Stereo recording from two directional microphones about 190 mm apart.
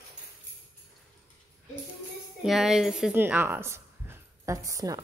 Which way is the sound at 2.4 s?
Centre (ahead or behind).